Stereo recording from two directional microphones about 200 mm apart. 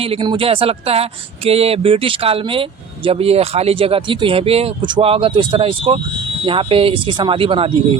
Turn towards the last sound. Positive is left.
turn(degrees=-25)  # may be behind; listen again after turning